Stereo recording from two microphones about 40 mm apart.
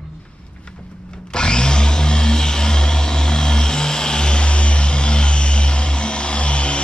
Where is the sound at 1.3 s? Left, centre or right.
Left.